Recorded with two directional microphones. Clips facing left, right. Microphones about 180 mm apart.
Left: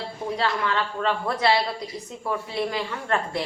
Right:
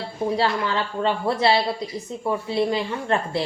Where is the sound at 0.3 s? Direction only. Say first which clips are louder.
Even; 30° right (ahead or behind).